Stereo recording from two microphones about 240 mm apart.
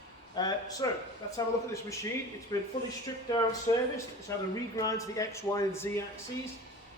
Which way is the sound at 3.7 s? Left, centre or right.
Centre.